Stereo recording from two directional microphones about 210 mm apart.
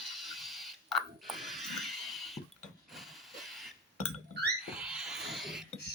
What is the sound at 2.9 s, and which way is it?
Hiss, centre (ahead or behind).